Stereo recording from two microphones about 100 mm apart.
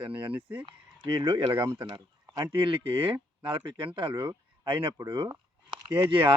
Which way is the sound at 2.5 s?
60° right (ahead or behind).